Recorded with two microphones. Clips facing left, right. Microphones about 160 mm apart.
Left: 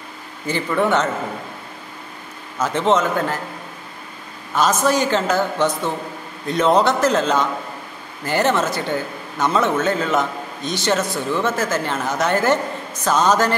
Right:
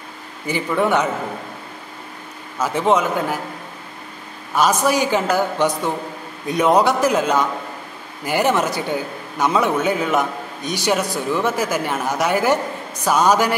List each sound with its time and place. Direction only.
0.5 s a man's voice: 10° right (ahead or behind)
2.6 s a man's voice: 10° right (ahead or behind)
4.6 s a man's voice: 10° right (ahead or behind)